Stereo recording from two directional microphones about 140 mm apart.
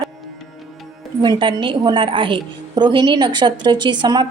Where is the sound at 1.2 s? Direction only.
35° right (ahead or behind).